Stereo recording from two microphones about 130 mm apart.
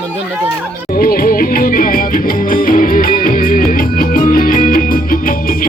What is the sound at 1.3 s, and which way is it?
Music, 90° left.